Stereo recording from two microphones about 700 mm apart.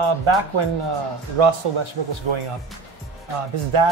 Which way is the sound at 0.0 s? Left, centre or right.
Right.